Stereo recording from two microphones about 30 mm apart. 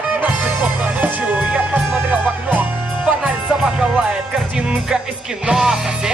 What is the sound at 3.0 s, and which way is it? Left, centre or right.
Music, right.